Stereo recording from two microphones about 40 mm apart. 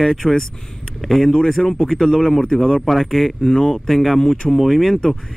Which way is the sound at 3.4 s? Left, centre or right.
Centre.